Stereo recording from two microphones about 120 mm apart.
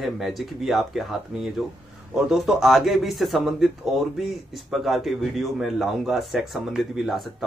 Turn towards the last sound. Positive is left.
turn(degrees=0)  # may be behind; listen again after turning